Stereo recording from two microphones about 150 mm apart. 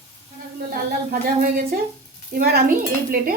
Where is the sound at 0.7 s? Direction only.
80° right.